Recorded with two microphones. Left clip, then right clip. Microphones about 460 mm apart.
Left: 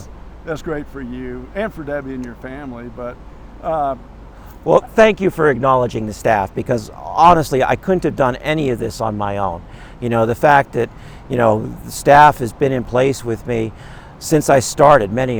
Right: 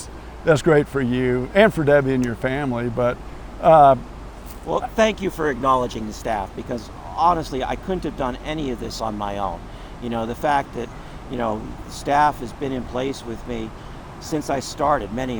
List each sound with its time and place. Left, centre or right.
0.4 s speech: right
4.7 s speech: left
10.0 s speech: left
11.3 s speech: left
14.2 s speech: left